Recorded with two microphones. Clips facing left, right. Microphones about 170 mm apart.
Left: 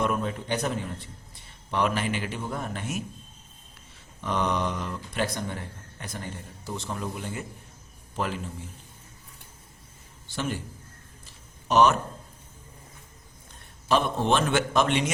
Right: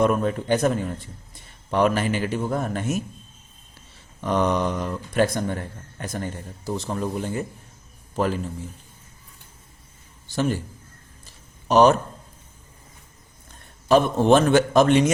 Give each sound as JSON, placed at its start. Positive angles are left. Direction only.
{"t": 0.0, "sound": "a man's voice", "side_deg": -45}
{"t": 1.7, "sound": "a man's voice", "side_deg": -45}
{"t": 4.2, "sound": "a man's voice", "side_deg": -45}
{"t": 10.2, "sound": "a man's voice", "side_deg": -40}
{"t": 11.7, "sound": "a man's voice", "side_deg": -35}
{"t": 13.8, "sound": "a man's voice", "side_deg": -45}